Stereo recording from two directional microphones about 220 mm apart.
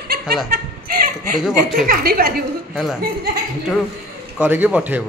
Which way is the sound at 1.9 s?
45° right (ahead or behind).